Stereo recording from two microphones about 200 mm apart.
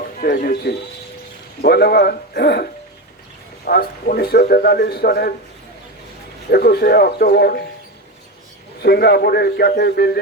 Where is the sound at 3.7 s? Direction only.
50° left (ahead or behind).